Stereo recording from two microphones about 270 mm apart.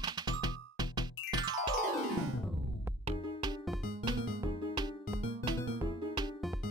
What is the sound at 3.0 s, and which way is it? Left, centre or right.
Music, centre.